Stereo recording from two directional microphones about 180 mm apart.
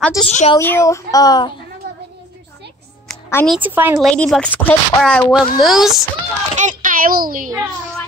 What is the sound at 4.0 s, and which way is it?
Speech, 5° left (ahead or behind).